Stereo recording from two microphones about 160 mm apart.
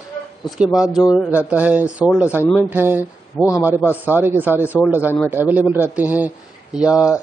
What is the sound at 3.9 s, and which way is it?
Speech, 10° right (ahead or behind).